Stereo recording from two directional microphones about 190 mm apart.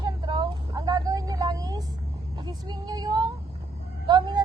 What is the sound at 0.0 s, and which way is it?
Vehicle, 25° right (ahead or behind).